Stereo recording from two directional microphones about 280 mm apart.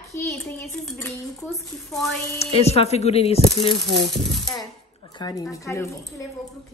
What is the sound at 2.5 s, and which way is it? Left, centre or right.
Speech, left.